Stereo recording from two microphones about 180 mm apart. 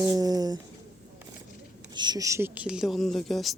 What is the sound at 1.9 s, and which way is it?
Speech, 25° right (ahead or behind).